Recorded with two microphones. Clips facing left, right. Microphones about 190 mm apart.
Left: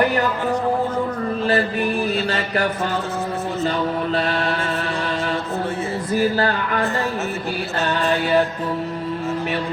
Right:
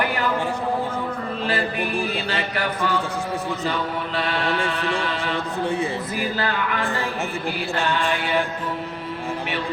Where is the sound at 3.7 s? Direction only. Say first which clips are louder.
Left 6 dB; 40° left (ahead or behind).